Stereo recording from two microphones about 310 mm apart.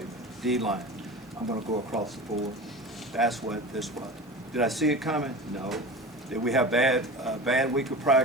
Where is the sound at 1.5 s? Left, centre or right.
Centre.